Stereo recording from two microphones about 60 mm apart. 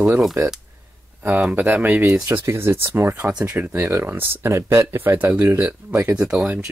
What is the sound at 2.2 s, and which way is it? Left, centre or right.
Speech, right.